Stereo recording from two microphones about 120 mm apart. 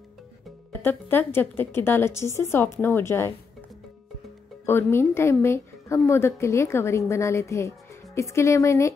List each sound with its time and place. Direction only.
0.8 s a woman's voice: 15° left (ahead or behind)
4.6 s a woman's voice: 20° left (ahead or behind)